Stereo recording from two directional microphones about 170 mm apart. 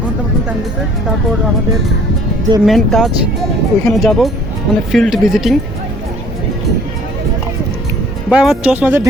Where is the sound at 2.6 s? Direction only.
Centre (ahead or behind).